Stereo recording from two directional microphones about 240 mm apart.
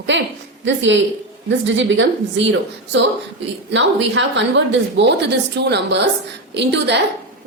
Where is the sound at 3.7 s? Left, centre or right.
Right.